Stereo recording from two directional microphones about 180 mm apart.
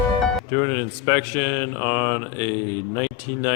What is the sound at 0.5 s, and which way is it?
A man's voice, 15° left (ahead or behind).